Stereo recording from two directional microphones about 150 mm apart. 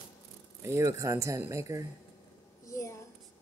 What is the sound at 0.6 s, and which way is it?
Speech, 20° right (ahead or behind).